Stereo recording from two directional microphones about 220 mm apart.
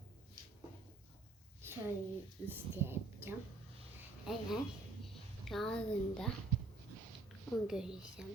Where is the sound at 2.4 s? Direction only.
10° right (ahead or behind).